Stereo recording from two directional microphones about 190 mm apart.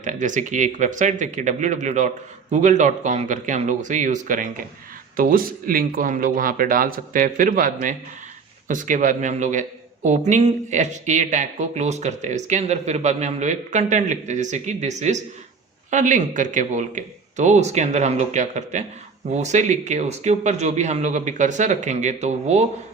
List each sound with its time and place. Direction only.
0.0 s a man's voice: 40° right (ahead or behind)